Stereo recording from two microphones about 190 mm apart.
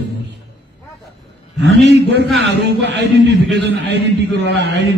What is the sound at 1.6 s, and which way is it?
A man's voice, 65° right (ahead or behind).